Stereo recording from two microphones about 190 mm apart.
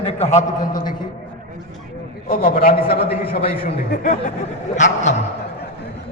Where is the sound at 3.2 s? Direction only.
30° left (ahead or behind).